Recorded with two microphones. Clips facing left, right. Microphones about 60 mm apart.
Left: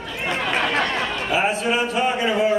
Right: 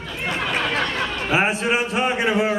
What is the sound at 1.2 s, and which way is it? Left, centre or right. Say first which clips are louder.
A man's voice: right 1 dB; right.